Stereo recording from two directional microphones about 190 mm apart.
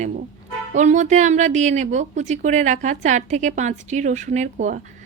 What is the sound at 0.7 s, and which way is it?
A woman's voice, 40° right (ahead or behind).